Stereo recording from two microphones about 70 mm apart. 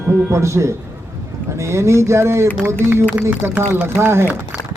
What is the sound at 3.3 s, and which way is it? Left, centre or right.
Speech, right.